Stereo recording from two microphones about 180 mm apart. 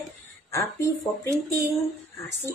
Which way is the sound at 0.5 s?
15° left (ahead or behind).